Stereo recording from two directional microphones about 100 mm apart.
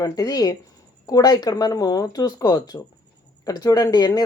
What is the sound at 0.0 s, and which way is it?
Speech, 35° left (ahead or behind).